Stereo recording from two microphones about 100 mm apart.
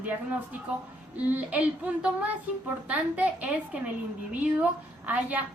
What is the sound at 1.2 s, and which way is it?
A woman's voice, 15° right (ahead or behind).